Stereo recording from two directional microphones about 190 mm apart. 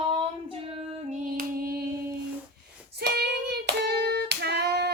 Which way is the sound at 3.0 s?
60° right (ahead or behind).